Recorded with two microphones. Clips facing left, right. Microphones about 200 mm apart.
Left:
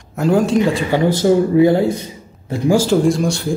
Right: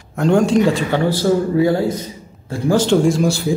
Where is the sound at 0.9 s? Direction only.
15° left (ahead or behind).